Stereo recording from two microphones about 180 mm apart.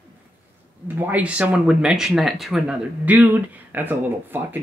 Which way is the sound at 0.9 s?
10° right (ahead or behind).